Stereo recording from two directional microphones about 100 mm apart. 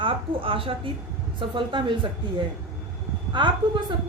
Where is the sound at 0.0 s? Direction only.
60° right (ahead or behind).